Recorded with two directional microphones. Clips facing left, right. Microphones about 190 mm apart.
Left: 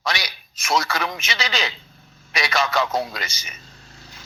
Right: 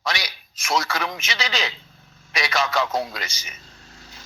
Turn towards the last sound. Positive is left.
turn(degrees=65)  # may be behind; listen again after turning